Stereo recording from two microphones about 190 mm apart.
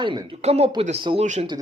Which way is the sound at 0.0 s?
30° right (ahead or behind).